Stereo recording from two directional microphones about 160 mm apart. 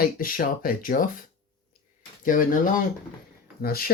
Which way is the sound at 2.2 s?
60° left (ahead or behind).